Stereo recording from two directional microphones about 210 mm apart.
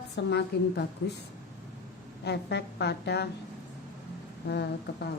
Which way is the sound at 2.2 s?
55° left (ahead or behind).